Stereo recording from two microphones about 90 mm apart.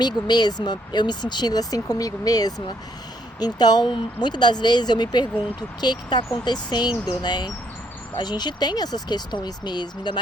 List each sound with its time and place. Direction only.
0.0 s speech: 50° left (ahead or behind)
6.9 s speech: 15° right (ahead or behind)
7.2 s speech: 50° left (ahead or behind)